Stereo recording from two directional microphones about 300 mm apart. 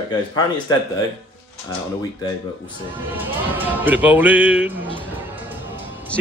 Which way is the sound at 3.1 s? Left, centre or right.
Centre.